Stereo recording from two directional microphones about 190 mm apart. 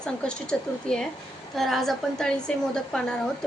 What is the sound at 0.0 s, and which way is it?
A woman's voice, 5° left (ahead or behind).